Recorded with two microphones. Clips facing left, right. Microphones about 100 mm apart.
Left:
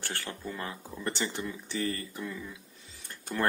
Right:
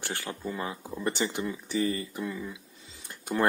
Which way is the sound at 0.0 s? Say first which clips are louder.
Right 3 dB; 15° right (ahead or behind).